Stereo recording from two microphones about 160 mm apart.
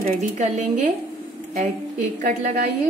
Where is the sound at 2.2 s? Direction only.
55° right (ahead or behind).